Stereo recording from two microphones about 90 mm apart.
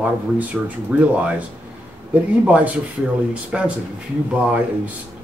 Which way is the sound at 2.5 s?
15° right (ahead or behind).